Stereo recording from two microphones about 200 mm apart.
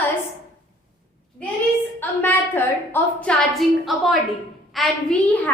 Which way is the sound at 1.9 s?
10° left (ahead or behind).